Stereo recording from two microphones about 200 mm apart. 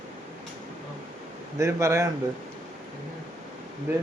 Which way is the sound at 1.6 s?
15° right (ahead or behind).